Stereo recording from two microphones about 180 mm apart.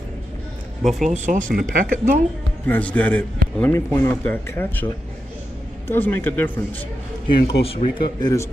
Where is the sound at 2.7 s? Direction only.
10° left (ahead or behind).